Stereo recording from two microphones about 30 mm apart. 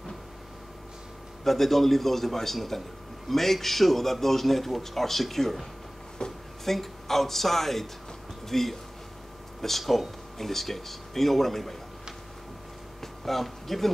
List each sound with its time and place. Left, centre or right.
1.4 s a man's voice: centre
6.2 s a sound: left
6.6 s speech: centre
13.0 s speech: centre